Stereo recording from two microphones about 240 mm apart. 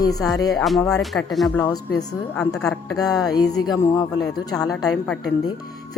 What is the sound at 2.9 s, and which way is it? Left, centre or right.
Speech, centre.